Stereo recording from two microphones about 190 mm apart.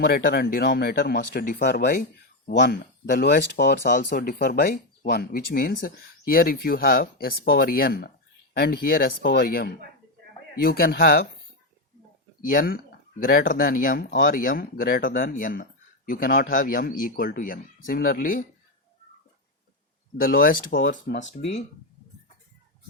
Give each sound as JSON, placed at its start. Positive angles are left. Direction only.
{"t": 0.0, "sound": "speech", "side_deg": 55}
{"t": 3.9, "sound": "speech", "side_deg": 50}
{"t": 12.4, "sound": "speech", "side_deg": 45}
{"t": 20.1, "sound": "speech", "side_deg": 50}